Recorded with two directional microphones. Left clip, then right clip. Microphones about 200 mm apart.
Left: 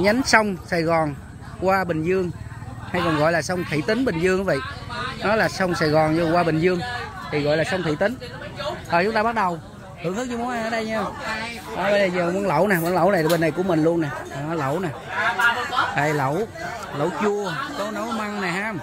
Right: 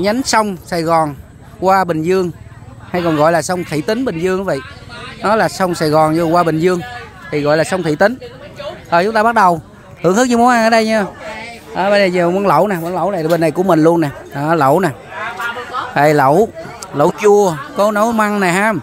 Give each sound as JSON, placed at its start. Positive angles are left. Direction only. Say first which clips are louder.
{"t": 0.3, "sound": "speech", "louder": "right 4 dB", "side_deg": -20}
{"t": 8.9, "sound": "speech", "louder": "right 9 dB", "side_deg": -25}
{"t": 10.0, "sound": "speech", "louder": "right 16 dB", "side_deg": -45}
{"t": 12.6, "sound": "speech", "louder": "right 2 dB", "side_deg": -15}
{"t": 13.3, "sound": "speech", "louder": "right 8 dB", "side_deg": -30}
{"t": 15.9, "sound": "speech", "louder": "right 12 dB", "side_deg": -40}